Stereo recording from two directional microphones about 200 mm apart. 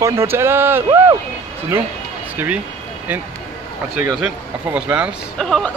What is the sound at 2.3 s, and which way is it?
Speech, 10° right (ahead or behind).